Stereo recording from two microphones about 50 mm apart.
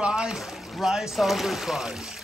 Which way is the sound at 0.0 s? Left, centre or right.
Centre.